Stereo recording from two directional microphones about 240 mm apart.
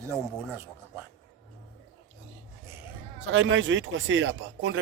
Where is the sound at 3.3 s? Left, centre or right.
Right.